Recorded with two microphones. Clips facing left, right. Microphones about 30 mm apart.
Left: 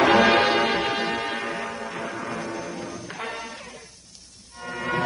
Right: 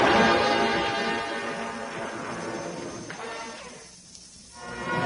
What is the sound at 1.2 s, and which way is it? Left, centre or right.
Church bell, left.